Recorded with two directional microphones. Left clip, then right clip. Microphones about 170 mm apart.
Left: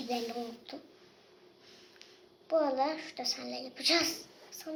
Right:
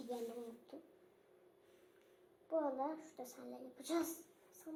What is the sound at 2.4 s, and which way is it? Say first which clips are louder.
Speech: left 10 dB; 20° left (ahead or behind).